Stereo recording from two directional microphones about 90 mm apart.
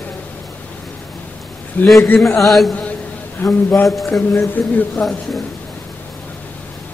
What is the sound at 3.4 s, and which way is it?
Speech, 25° left (ahead or behind).